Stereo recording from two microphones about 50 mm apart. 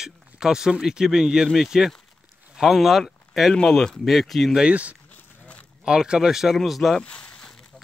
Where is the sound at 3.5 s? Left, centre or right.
Centre.